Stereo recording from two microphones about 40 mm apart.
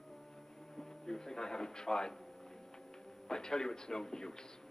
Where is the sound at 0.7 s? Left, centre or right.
Centre.